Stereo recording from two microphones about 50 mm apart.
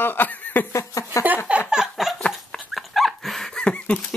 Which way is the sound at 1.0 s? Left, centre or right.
Left.